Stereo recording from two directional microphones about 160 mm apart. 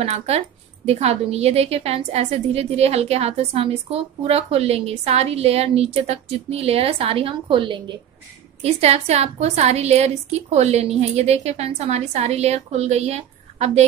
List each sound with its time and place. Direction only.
0.0 s a woman's voice: 40° right (ahead or behind)